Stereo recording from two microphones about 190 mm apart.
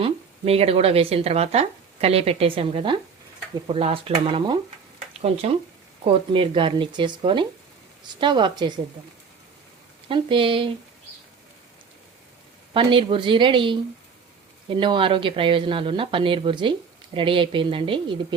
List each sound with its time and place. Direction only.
0.0 s speech: 30° right (ahead or behind)
10.1 s speech: 25° right (ahead or behind)
12.7 s speech: 25° right (ahead or behind)